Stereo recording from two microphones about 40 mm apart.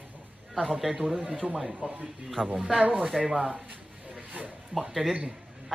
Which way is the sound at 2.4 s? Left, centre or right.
Right.